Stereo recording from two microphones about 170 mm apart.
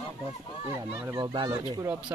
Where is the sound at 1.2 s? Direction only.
30° right (ahead or behind).